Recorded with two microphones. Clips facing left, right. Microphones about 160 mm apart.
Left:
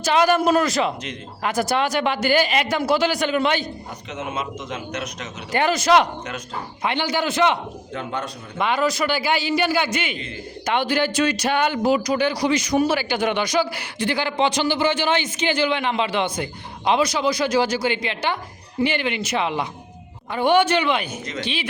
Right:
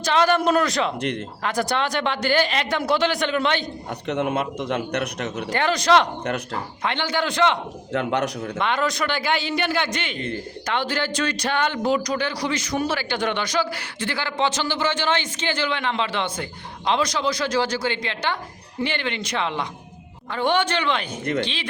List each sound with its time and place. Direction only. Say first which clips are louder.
0.0 s speech: left 2 dB; 10° left (ahead or behind)
4.0 s speech: right 6 dB; 65° right (ahead or behind)
5.5 s a man's voice: left 2 dB; 10° left (ahead or behind)
6.2 s speech: right 5 dB; 65° right (ahead or behind)
6.8 s a man's voice: left 2 dB; 10° left (ahead or behind)
7.9 s a man's voice: right 6 dB; 80° right
8.5 s a man's voice: left 4 dB; 5° left (ahead or behind)